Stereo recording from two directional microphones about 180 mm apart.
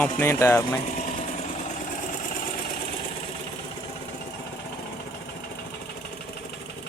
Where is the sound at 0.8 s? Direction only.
45° left (ahead or behind).